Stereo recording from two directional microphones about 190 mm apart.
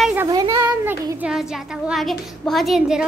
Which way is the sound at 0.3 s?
20° right (ahead or behind).